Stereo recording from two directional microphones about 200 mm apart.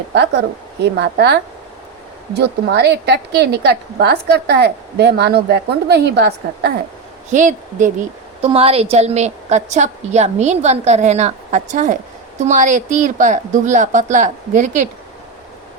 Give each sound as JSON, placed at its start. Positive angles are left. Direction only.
{"t": 0.8, "sound": "a woman's voice", "side_deg": -55}
{"t": 7.3, "sound": "a woman's voice", "side_deg": -40}